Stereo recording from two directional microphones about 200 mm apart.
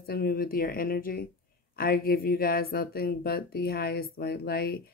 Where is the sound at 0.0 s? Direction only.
50° left (ahead or behind).